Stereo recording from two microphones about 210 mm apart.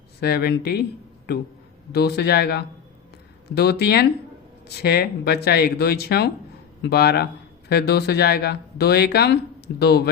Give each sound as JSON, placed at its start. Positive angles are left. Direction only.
{"t": 0.2, "sound": "speech", "side_deg": 50}
{"t": 1.9, "sound": "speech", "side_deg": 50}